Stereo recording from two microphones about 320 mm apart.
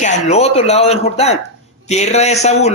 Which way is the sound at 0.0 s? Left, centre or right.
Left.